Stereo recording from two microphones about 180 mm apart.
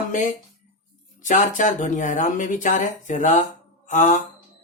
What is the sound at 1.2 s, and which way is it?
Speech, 45° left (ahead or behind).